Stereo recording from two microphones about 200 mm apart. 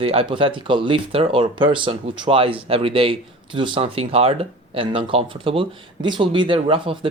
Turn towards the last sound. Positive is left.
turn(degrees=-25)  # may be behind; listen again after turning